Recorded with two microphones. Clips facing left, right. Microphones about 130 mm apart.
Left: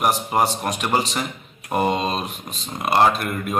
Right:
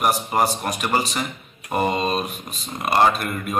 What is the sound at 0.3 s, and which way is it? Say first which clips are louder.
Speech: left 1 dB; 5° left (ahead or behind).